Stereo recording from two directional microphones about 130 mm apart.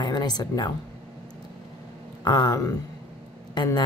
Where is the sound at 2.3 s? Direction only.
30° left (ahead or behind).